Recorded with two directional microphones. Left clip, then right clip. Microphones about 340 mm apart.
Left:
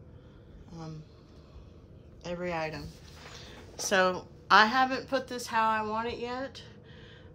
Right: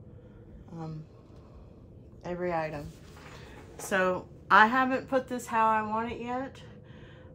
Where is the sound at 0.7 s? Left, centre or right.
Centre.